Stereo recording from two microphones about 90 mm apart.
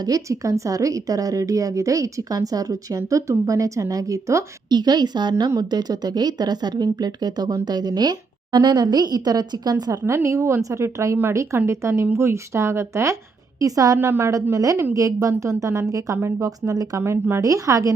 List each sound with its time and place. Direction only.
0.0 s a woman's voice: 40° right (ahead or behind)
4.7 s speech: 50° right (ahead or behind)
10.1 s a woman's voice: 30° right (ahead or behind)
17.0 s a woman's voice: 25° right (ahead or behind)